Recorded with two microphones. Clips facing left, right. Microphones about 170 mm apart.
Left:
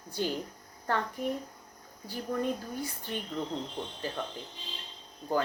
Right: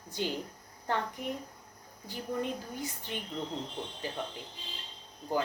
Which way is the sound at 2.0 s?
20° right (ahead or behind).